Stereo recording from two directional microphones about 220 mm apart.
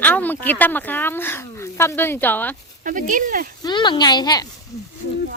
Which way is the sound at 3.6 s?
20° left (ahead or behind).